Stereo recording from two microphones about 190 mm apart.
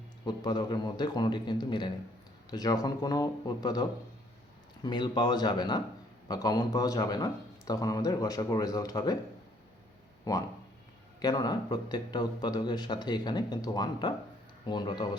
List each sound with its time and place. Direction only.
0.3 s a man's voice: 20° left (ahead or behind)
10.3 s a man's voice: 20° left (ahead or behind)